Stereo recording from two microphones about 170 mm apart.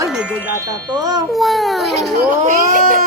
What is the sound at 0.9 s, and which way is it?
Speech, 25° right (ahead or behind).